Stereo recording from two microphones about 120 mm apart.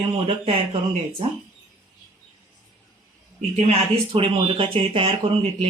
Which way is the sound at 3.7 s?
50° right (ahead or behind).